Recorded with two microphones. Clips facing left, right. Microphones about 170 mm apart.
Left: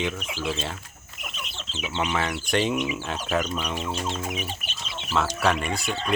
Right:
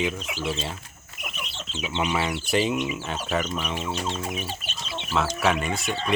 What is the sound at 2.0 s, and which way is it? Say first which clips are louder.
Speech: right 1 dB; 10° right (ahead or behind).